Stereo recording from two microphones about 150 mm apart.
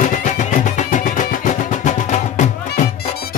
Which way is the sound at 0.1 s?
55° left (ahead or behind).